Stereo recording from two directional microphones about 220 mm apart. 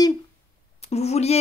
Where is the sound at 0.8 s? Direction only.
30° left (ahead or behind).